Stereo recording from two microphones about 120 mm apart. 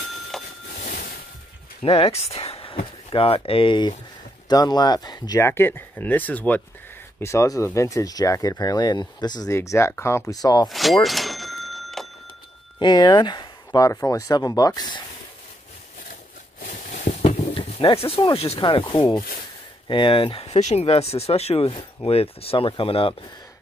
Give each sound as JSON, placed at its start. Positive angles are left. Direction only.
{"t": 0.3, "sound": "a sound", "side_deg": 5}
{"t": 1.8, "sound": "speech", "side_deg": 55}
{"t": 5.4, "sound": "speech", "side_deg": 20}
{"t": 7.2, "sound": "speech", "side_deg": 25}
{"t": 9.5, "sound": "speech", "side_deg": 25}
{"t": 10.4, "sound": "speech", "side_deg": 35}
{"t": 10.7, "sound": "a sound", "side_deg": 0}
{"t": 12.7, "sound": "speech", "side_deg": 40}
{"t": 13.7, "sound": "speech", "side_deg": 30}
{"t": 16.6, "sound": "a sound", "side_deg": 90}
{"t": 17.6, "sound": "speech", "side_deg": 45}
{"t": 19.9, "sound": "speech", "side_deg": 45}